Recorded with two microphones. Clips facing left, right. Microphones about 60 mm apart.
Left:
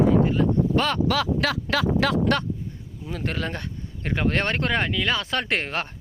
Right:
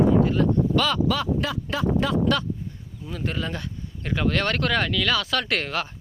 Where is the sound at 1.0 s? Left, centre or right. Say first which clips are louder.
Left 1 dB; left.